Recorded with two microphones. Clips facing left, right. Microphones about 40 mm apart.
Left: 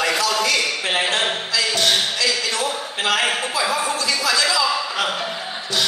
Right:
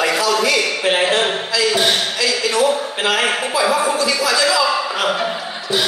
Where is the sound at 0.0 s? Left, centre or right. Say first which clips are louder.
Right 3 dB; centre.